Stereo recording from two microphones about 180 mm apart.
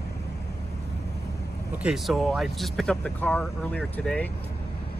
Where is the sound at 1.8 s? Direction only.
Centre (ahead or behind).